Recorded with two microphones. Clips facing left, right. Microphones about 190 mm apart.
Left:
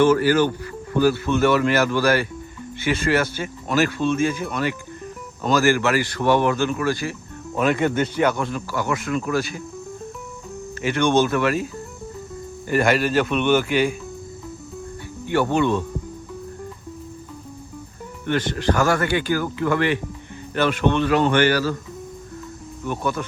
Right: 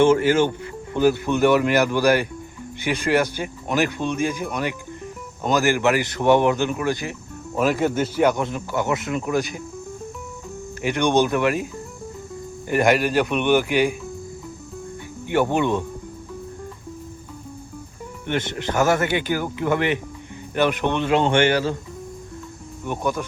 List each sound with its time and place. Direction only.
0.0 s speech: 25° right (ahead or behind)
7.5 s speech: 5° right (ahead or behind)
10.8 s speech: 15° right (ahead or behind)
12.6 s speech: 15° right (ahead or behind)
15.3 s speech: 15° right (ahead or behind)
18.3 s speech: 20° right (ahead or behind)
22.9 s speech: 15° right (ahead or behind)